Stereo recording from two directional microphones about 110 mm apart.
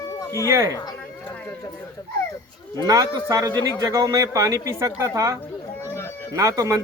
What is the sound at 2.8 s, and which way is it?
Speech, 35° right (ahead or behind).